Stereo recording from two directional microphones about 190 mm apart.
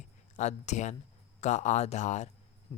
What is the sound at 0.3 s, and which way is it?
Speech, 35° left (ahead or behind).